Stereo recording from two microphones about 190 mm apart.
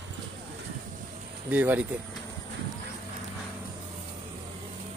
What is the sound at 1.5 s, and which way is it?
Speech, 10° right (ahead or behind).